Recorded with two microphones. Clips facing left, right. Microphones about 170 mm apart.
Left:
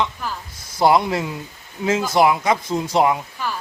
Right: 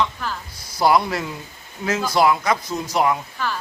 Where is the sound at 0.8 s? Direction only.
20° left (ahead or behind).